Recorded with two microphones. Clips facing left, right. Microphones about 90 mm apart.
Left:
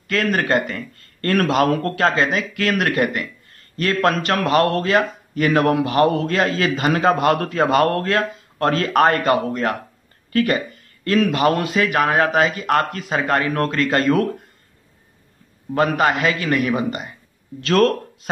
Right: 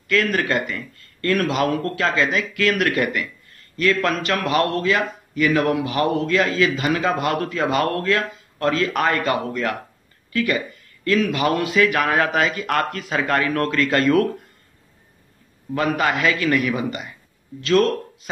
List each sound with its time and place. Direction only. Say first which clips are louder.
0.1 s a man's voice: left 1 dB; 35° left (ahead or behind)
15.7 s a man's voice: left 3 dB; 35° left (ahead or behind)
17.6 s speech: left 1 dB; 55° left (ahead or behind)